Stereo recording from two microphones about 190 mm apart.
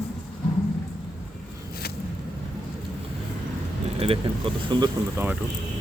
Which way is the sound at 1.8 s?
55° left (ahead or behind).